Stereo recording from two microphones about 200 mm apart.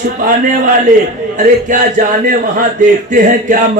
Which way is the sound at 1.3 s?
40° right (ahead or behind).